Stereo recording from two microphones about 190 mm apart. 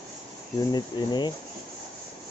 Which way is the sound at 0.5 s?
20° left (ahead or behind).